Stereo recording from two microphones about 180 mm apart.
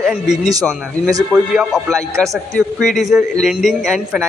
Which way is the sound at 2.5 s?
Centre (ahead or behind).